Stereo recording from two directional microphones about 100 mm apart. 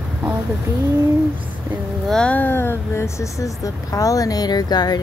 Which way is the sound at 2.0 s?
5° left (ahead or behind).